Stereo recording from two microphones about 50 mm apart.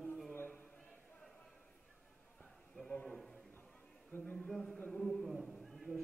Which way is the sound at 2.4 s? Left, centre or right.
Centre.